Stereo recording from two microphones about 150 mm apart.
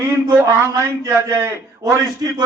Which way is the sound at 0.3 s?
15° right (ahead or behind).